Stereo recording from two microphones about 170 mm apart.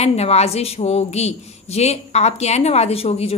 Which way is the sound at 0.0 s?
40° left (ahead or behind).